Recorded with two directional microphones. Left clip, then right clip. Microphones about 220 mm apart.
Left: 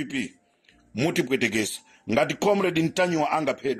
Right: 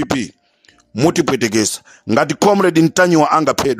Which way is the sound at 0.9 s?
45° right (ahead or behind).